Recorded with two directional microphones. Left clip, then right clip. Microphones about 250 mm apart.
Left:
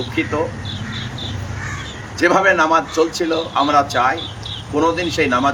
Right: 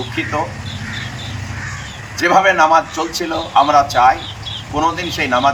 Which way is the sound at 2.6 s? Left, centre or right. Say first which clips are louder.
Right 2 dB; left.